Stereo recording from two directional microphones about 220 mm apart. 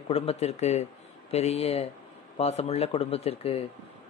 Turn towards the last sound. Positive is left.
turn(degrees=25)  # may be behind; listen again after turning